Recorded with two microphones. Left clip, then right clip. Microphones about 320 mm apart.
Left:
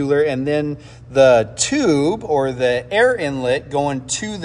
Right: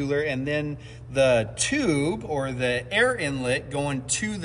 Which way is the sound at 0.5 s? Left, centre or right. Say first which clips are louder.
Left 8 dB; left.